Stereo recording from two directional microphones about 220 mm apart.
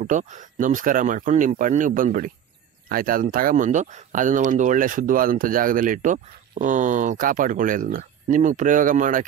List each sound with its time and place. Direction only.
0.0 s speech: 35° right (ahead or behind)